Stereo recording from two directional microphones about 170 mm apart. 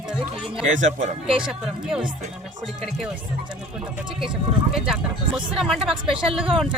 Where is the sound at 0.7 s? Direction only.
45° right (ahead or behind).